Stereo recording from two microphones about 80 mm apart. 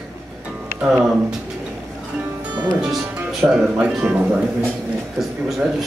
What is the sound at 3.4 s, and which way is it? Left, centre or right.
Speech, centre.